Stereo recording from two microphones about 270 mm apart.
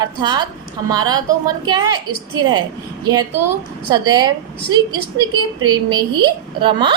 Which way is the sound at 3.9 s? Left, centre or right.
Centre.